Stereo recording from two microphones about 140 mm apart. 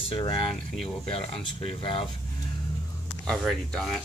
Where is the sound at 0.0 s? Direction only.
40° left (ahead or behind).